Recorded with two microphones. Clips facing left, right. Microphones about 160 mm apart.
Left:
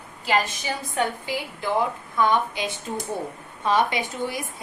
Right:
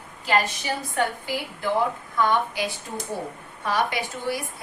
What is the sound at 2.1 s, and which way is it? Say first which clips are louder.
A woman's voice: left 1 dB; 20° left (ahead or behind).